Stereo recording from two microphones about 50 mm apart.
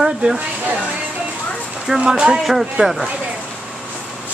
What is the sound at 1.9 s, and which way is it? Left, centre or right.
Speech, centre.